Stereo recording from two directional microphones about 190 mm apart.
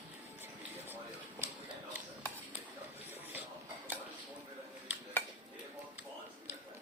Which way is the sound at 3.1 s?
10° right (ahead or behind).